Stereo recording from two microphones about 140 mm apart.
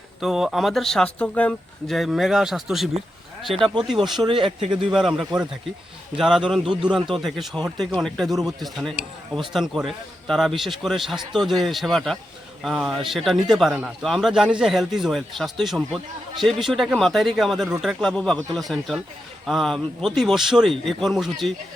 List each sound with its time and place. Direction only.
0.2 s a man's voice: 5° right (ahead or behind)
4.3 s speech: 35° right (ahead or behind)
4.9 s a man's voice: 5° right (ahead or behind)